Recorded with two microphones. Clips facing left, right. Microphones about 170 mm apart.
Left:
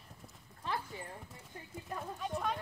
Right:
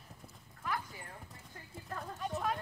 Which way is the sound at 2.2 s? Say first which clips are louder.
Right 1 dB; centre (ahead or behind).